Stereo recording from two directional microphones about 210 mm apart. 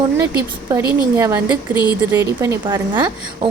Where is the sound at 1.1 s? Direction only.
10° right (ahead or behind).